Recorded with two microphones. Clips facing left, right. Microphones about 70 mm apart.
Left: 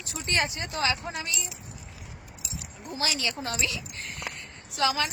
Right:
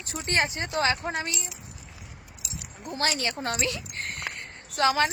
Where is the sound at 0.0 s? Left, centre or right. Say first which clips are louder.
Right 2 dB; right.